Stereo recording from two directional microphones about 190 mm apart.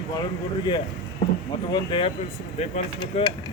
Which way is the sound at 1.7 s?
25° left (ahead or behind).